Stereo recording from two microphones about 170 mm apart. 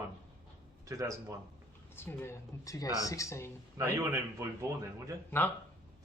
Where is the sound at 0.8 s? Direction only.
20° right (ahead or behind).